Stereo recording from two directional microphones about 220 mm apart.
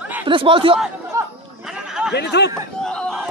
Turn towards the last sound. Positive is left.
turn(degrees=5)  # may be behind; listen again after turning